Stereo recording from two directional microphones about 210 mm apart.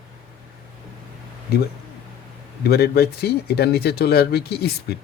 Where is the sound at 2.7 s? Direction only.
50° left (ahead or behind).